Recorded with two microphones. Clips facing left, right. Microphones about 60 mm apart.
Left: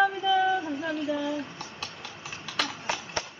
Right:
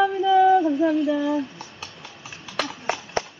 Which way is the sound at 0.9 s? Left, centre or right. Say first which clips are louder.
Right 7 dB; right.